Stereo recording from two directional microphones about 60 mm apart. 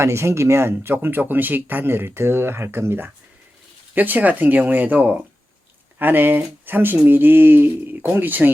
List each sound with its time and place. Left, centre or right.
0.0 s speech: right
3.9 s speech: right